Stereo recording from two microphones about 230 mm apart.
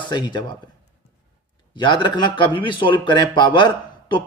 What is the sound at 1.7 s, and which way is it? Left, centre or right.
A man's voice, centre.